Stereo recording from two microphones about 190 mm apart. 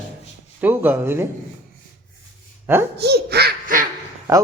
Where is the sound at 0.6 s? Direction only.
10° right (ahead or behind).